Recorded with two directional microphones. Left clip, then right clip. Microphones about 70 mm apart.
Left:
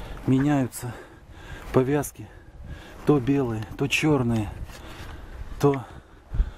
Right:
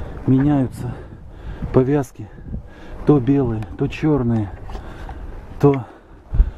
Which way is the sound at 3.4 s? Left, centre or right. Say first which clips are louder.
Right 5 dB; left.